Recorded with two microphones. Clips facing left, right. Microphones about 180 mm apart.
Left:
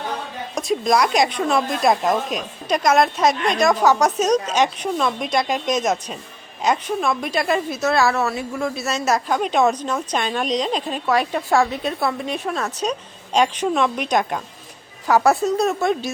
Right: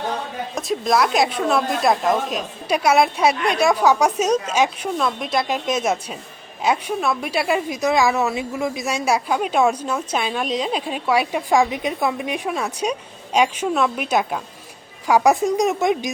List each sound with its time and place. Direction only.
0.5 s a woman's voice: centre (ahead or behind)